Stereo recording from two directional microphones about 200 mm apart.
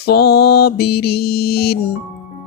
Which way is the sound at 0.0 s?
55° left (ahead or behind).